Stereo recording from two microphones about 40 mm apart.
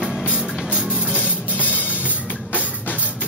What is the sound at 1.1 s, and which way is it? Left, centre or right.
Music, left.